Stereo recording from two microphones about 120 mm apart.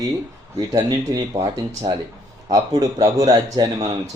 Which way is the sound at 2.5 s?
30° right (ahead or behind).